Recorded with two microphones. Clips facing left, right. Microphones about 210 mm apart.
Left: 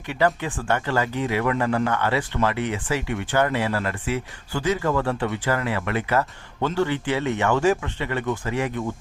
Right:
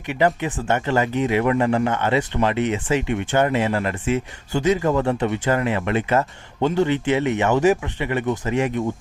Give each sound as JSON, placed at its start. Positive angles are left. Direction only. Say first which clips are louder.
{"t": 0.1, "sound": "speech", "louder": "right 2 dB", "side_deg": -20}